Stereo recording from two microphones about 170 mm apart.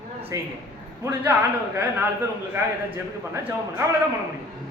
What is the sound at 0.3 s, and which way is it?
Speech, 20° right (ahead or behind).